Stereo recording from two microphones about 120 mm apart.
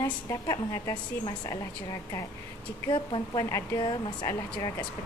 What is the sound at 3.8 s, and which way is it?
Speech, 40° left (ahead or behind).